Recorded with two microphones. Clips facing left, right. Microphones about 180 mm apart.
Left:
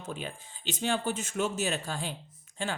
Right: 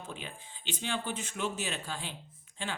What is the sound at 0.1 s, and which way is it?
A man's voice, 40° left (ahead or behind).